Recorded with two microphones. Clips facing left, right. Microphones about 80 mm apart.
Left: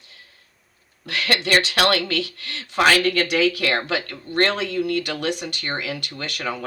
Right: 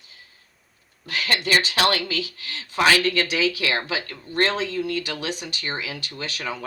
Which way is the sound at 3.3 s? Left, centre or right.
Left.